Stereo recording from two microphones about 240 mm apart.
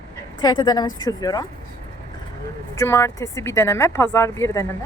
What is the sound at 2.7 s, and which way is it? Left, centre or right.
Speech, centre.